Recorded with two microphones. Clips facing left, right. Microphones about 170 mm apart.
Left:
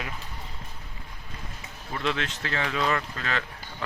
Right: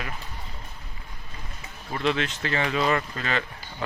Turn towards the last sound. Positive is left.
turn(degrees=-5)  # may be behind; listen again after turning